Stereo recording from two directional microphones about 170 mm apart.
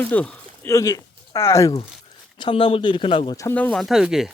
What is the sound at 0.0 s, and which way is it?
Speech, 10° left (ahead or behind).